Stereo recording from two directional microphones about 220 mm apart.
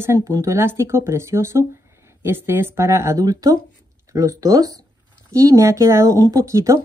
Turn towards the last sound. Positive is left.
turn(degrees=-15)  # may be behind; listen again after turning